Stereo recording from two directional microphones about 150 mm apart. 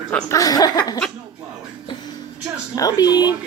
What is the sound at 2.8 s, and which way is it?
Speech, 25° left (ahead or behind).